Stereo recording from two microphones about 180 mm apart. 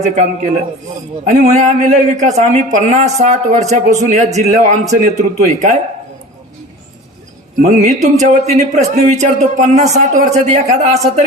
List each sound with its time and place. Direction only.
0.0 s speech: 40° right (ahead or behind)
7.6 s speech: 40° right (ahead or behind)